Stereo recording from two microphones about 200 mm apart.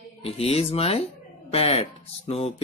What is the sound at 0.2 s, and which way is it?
Speech, 30° left (ahead or behind).